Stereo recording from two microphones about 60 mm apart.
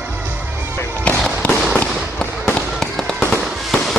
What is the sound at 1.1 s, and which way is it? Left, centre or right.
Fireworks, left.